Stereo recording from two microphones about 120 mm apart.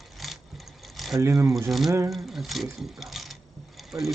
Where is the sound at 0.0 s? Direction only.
Centre (ahead or behind).